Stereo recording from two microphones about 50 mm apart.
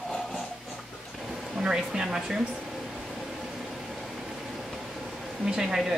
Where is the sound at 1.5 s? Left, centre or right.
Centre.